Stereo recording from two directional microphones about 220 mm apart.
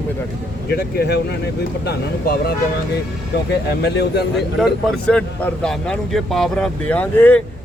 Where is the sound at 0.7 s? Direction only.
45° left (ahead or behind).